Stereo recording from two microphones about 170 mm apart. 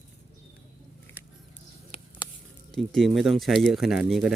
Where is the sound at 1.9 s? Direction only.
35° left (ahead or behind).